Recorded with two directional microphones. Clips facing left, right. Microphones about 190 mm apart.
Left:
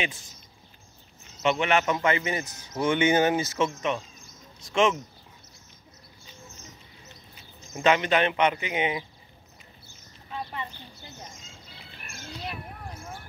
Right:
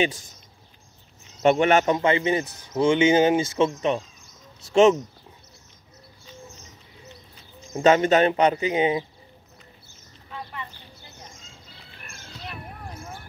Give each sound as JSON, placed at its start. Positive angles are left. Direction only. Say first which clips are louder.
{"t": 1.4, "sound": "speech", "louder": "right 6 dB", "side_deg": -45}
{"t": 1.9, "sound": "speech", "louder": "right 5 dB", "side_deg": -25}
{"t": 7.7, "sound": "speech", "louder": "right 5 dB", "side_deg": -40}
{"t": 10.3, "sound": "a sound", "louder": "left 2 dB", "side_deg": 25}